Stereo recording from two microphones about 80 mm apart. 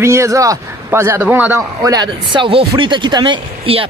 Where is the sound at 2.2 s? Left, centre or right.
Right.